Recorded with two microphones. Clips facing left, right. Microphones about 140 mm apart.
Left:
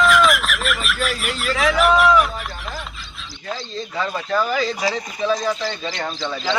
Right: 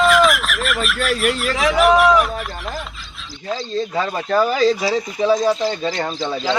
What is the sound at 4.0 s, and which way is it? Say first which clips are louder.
Speech: right 3 dB; 40° right (ahead or behind).